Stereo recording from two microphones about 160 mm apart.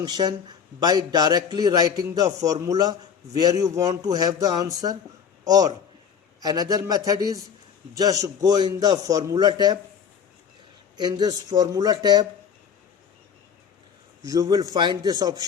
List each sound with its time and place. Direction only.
0.0 s a man's voice: 25° right (ahead or behind)
10.9 s a man's voice: 25° right (ahead or behind)
14.3 s a man's voice: 25° right (ahead or behind)